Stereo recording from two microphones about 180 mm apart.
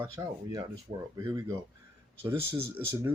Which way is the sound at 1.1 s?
20° right (ahead or behind).